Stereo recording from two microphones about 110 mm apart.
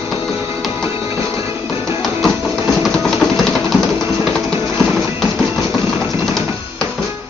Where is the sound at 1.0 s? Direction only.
25° right (ahead or behind).